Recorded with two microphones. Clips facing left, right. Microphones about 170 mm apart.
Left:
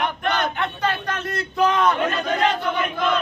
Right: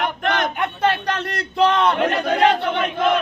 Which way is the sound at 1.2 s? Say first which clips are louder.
Right 2 dB; 70° right (ahead or behind).